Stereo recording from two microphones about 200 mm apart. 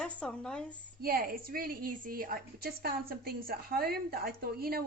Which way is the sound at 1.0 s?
50° right (ahead or behind).